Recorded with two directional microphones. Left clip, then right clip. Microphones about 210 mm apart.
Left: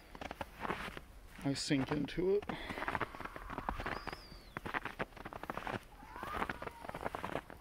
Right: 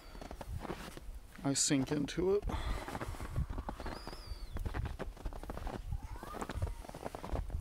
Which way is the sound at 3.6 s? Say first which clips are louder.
Left 5 dB; 20° right (ahead or behind).